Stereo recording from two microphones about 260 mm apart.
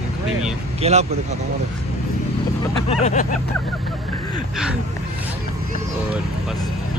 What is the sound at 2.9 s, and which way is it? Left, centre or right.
Vehicle, left.